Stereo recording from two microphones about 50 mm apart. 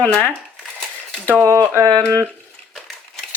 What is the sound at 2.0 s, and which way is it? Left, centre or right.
Speech, right.